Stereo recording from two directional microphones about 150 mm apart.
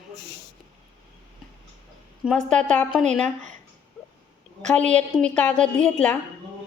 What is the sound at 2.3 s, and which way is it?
Speech, 5° left (ahead or behind).